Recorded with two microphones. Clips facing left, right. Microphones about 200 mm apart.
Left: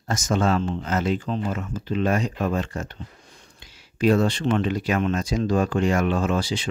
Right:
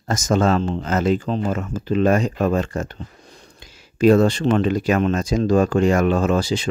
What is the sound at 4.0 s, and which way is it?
Speech, 45° right (ahead or behind).